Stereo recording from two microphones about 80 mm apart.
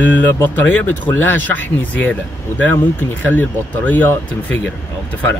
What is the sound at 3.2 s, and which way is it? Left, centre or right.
Speech, left.